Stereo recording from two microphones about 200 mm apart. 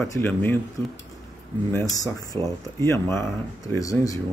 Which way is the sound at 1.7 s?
15° left (ahead or behind).